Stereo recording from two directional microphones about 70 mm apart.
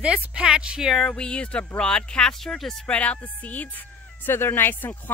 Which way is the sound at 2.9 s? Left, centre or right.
Centre.